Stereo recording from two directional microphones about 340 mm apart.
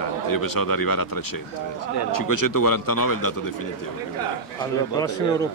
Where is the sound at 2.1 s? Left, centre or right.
Left.